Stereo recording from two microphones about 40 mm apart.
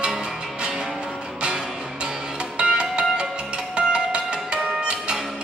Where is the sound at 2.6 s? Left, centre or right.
Right.